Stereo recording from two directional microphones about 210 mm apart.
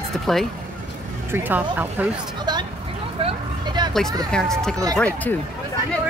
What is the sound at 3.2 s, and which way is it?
Vehicle, 20° right (ahead or behind).